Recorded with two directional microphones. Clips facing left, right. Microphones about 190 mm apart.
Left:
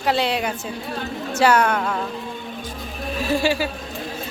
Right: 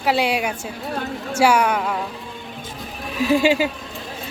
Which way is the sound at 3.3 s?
15° right (ahead or behind).